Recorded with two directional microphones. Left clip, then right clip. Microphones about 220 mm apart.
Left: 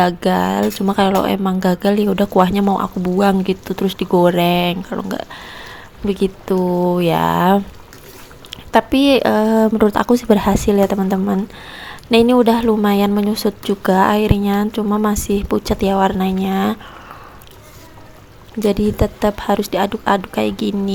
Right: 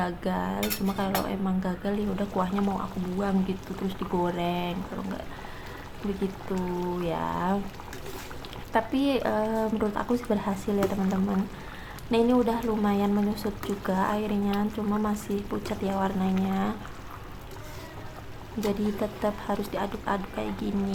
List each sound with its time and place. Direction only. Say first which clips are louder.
0.0 s a woman's voice: left 15 dB; 35° left (ahead or behind)
7.0 s a woman's voice: left 14 dB; 40° left (ahead or behind)
18.7 s a woman's voice: left 12 dB; 35° left (ahead or behind)